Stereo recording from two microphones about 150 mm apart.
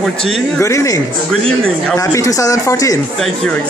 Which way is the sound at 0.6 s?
20° left (ahead or behind).